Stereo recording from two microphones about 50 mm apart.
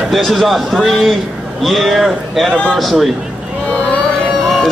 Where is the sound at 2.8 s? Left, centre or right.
Centre.